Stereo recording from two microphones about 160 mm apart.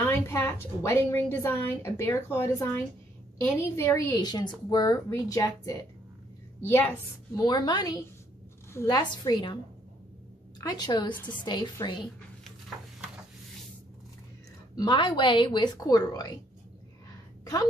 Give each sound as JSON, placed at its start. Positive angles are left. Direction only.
{"t": 0.0, "sound": "a woman's voice", "side_deg": 15}
{"t": 7.3, "sound": "a woman's voice", "side_deg": 25}
{"t": 10.6, "sound": "a woman's voice", "side_deg": 25}
{"t": 12.4, "sound": "a sound", "side_deg": 0}
{"t": 14.8, "sound": "a woman's voice", "side_deg": 30}